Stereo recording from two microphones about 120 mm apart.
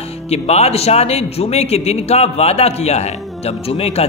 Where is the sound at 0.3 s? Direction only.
60° left (ahead or behind).